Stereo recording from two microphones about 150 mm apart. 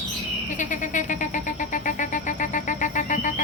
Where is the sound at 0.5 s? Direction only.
55° left (ahead or behind).